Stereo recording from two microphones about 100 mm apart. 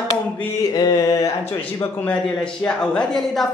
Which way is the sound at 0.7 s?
40° left (ahead or behind).